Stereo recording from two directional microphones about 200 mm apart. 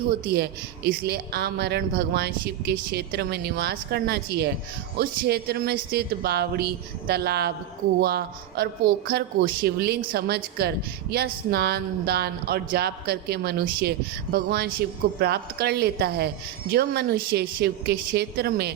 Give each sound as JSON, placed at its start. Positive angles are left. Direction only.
{"t": 0.9, "sound": "a woman's voice", "side_deg": -50}